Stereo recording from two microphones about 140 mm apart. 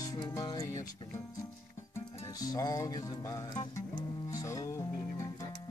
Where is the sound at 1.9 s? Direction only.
25° left (ahead or behind).